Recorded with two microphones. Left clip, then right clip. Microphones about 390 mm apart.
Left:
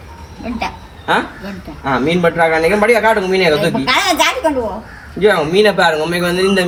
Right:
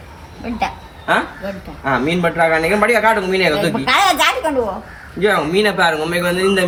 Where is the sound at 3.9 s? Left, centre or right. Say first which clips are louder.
Right 1 dB; right.